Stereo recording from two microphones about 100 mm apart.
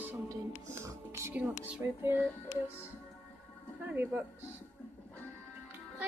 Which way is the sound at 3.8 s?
20° right (ahead or behind).